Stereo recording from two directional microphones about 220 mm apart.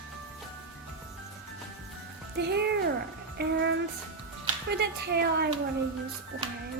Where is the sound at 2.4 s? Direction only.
50° right (ahead or behind).